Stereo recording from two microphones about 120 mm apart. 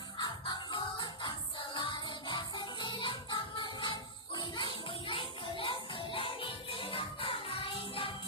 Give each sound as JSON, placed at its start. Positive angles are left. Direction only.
{"t": 0.7, "sound": "music", "side_deg": 40}